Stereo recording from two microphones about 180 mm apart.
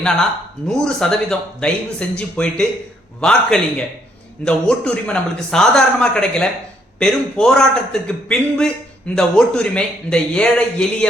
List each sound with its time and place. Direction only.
0.7 s speech: 5° left (ahead or behind)